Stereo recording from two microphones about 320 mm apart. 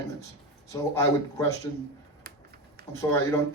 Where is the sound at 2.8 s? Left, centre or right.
Right.